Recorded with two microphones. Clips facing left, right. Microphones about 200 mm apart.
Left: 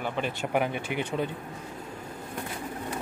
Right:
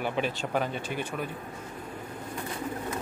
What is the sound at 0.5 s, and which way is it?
Speech, 15° left (ahead or behind).